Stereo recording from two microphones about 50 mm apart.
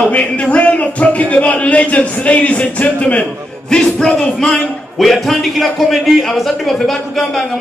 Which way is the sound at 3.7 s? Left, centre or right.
Centre.